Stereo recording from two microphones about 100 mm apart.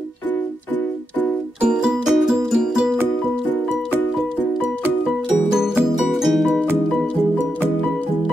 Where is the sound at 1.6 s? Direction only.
10° right (ahead or behind).